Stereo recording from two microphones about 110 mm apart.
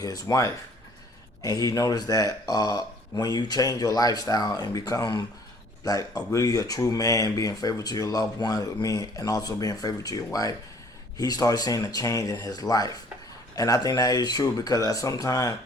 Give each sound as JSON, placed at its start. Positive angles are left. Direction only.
{"t": 0.0, "sound": "speech", "side_deg": 35}